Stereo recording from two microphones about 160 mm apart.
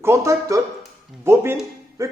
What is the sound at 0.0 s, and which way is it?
Speech, 20° right (ahead or behind).